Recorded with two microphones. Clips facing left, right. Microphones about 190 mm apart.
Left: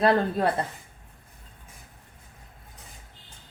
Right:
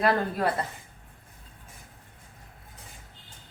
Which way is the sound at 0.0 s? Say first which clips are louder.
Left 3 dB; 25° left (ahead or behind).